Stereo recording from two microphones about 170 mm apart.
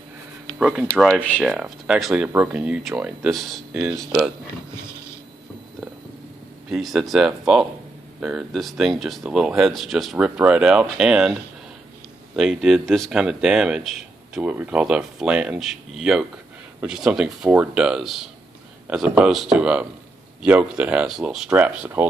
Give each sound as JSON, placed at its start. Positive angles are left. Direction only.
{"t": 0.6, "sound": "speech", "side_deg": -5}
{"t": 4.8, "sound": "a sound", "side_deg": 15}
{"t": 6.7, "sound": "speech", "side_deg": 0}